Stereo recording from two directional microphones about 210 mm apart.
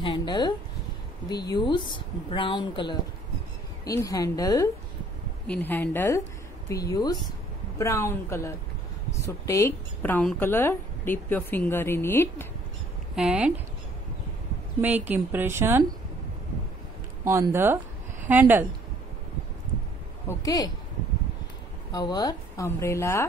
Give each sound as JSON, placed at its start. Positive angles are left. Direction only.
{"t": 0.0, "sound": "a woman's voice", "side_deg": 20}
{"t": 13.1, "sound": "speech", "side_deg": -5}
{"t": 14.8, "sound": "a woman's voice", "side_deg": -10}
{"t": 17.2, "sound": "a woman's voice", "side_deg": -10}
{"t": 20.2, "sound": "speech", "side_deg": 20}
{"t": 21.9, "sound": "a woman's voice", "side_deg": 20}